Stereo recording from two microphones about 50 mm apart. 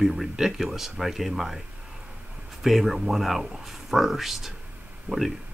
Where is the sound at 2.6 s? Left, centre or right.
Centre.